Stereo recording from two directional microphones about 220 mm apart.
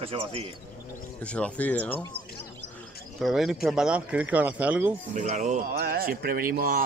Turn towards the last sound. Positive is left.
turn(degrees=-40)  # may be behind; listen again after turning